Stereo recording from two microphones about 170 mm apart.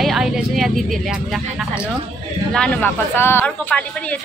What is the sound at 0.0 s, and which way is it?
A woman's voice, centre (ahead or behind).